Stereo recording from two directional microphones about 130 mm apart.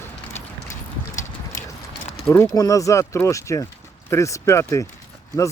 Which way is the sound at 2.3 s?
25° left (ahead or behind).